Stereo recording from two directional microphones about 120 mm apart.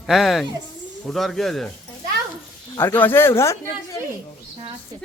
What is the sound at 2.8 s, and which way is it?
Speech, 15° left (ahead or behind).